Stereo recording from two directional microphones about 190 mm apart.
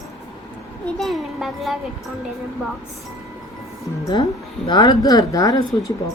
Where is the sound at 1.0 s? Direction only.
Centre (ahead or behind).